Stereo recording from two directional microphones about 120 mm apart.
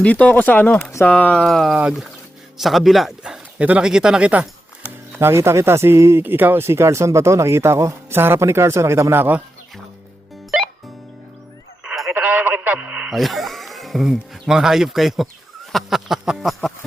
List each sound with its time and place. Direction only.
0.0 s speech: 10° left (ahead or behind); by 4.4 s 10° right (ahead or behind)
5.2 s speech: 20° right (ahead or behind)
11.9 s radio: centre (ahead or behind)
12.1 s radio: 15° right (ahead or behind)
13.1 s speech: centre (ahead or behind)